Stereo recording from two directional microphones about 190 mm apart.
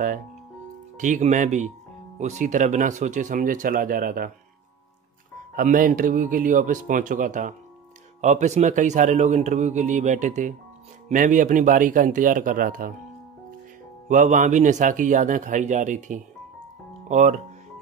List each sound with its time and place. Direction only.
0.9 s speech: 40° right (ahead or behind)
5.5 s speech: 45° right (ahead or behind)
14.0 s speech: 40° right (ahead or behind)